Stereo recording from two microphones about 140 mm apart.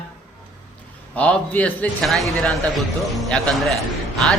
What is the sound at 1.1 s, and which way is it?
Speech, 10° left (ahead or behind).